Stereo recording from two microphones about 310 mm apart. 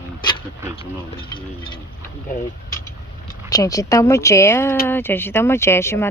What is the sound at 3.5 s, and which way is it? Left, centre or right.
A woman's voice, centre.